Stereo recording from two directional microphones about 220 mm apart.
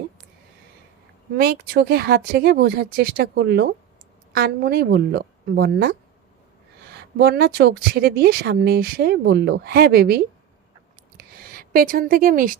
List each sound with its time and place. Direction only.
1.4 s speech: 45° right (ahead or behind)
7.2 s speech: 45° right (ahead or behind)
11.2 s a sound: 40° right (ahead or behind)